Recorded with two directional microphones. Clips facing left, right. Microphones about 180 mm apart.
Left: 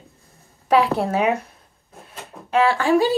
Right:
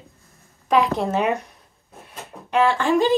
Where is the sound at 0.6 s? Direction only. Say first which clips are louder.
Left 2 dB; 60° left (ahead or behind).